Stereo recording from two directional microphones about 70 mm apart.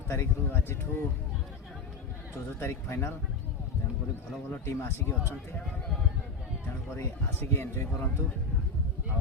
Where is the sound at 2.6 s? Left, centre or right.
Left.